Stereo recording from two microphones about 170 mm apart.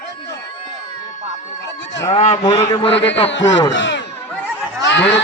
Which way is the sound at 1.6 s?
90° left.